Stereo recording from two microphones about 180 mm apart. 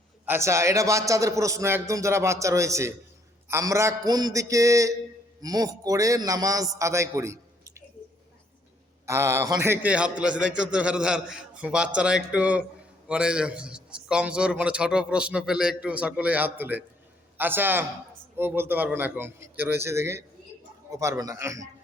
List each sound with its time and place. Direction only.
0.3 s a man's voice: 15° right (ahead or behind)
9.0 s a man's voice: 15° right (ahead or behind)